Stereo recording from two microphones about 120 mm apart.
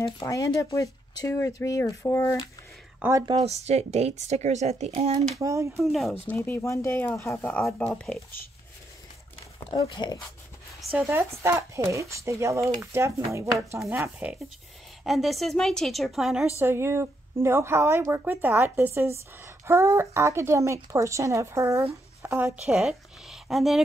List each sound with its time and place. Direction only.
0.2 s speech: 30° left (ahead or behind)
3.0 s speech: 25° right (ahead or behind)
3.4 s a woman's voice: 65° right (ahead or behind)
5.4 s a woman's voice: 25° right (ahead or behind)
5.9 s a woman's voice: centre (ahead or behind)
6.2 s speech: 15° left (ahead or behind)
7.6 s speech: 10° left (ahead or behind)
9.8 s speech: 40° left (ahead or behind)
10.8 s speech: 5° right (ahead or behind)
11.1 s a woman's voice: 20° right (ahead or behind)
15.0 s a woman's voice: centre (ahead or behind)
16.5 s a woman's voice: 20° right (ahead or behind)
22.7 s speech: 5° right (ahead or behind)